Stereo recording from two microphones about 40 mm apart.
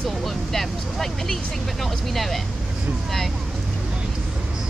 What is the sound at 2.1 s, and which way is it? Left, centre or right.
Speech, centre.